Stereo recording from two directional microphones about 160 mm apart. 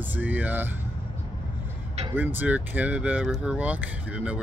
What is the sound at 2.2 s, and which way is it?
Speech, 10° right (ahead or behind).